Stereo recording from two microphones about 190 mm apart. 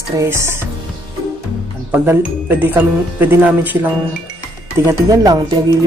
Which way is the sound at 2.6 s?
10° right (ahead or behind).